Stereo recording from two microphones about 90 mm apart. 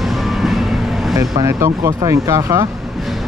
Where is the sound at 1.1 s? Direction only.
35° right (ahead or behind).